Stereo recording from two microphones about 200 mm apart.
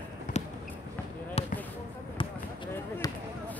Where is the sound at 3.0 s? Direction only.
20° left (ahead or behind).